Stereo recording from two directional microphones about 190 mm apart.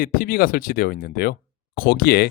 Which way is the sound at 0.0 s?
50° left (ahead or behind).